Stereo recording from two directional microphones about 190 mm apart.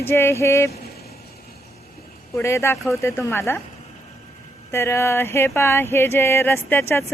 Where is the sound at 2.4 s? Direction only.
15° left (ahead or behind).